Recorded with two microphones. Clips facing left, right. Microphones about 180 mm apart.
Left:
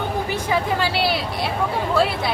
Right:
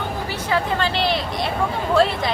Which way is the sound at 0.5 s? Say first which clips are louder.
Right 1 dB; 5° left (ahead or behind).